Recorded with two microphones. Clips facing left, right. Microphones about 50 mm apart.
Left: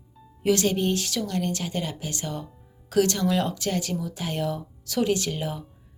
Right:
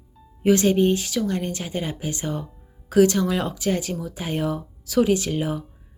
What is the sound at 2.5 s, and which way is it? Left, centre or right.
Speech, centre.